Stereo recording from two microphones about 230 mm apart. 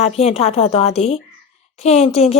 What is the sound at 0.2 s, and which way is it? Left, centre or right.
A woman's voice, left.